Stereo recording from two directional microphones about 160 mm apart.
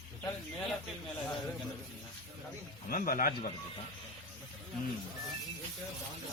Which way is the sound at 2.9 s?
65° left (ahead or behind).